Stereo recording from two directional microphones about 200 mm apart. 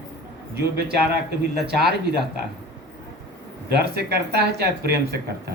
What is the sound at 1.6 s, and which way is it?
Speech, 55° right (ahead or behind).